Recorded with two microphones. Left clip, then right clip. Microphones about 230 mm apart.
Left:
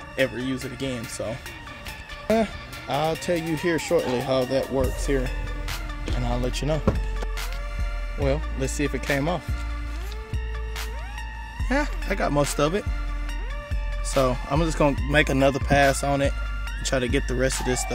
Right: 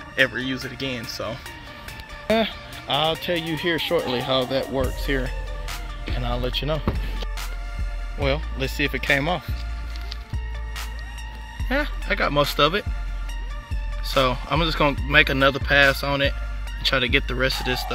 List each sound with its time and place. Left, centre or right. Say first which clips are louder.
0.1 s speech: right 4 dB; centre
2.2 s speech: right 1 dB; centre
2.9 s speech: right 2 dB; centre
3.9 s speech: left 1 dB; centre
8.2 s speech: right 2 dB; centre
11.7 s speech: right 2 dB; centre
14.1 s speech: right 2 dB; centre